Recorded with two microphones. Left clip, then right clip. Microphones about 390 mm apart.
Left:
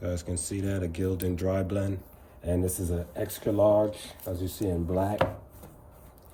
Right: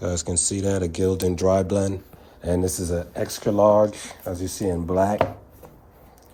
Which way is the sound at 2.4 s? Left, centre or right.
Right.